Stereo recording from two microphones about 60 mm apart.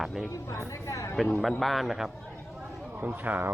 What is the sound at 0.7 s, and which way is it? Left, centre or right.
Speech, left.